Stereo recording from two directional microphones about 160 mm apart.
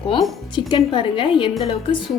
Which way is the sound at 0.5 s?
30° left (ahead or behind).